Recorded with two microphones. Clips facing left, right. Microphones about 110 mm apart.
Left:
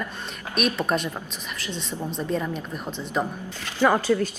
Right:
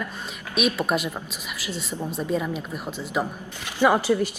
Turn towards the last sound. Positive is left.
turn(degrees=-10)  # may be behind; listen again after turning